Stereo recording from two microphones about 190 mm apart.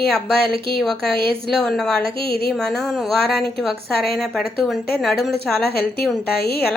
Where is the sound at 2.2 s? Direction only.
55° left (ahead or behind).